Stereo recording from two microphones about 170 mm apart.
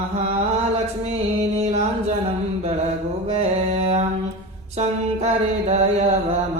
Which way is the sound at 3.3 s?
40° right (ahead or behind).